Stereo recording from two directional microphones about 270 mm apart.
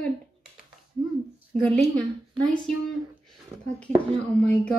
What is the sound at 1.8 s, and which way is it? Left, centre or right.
Speech, centre.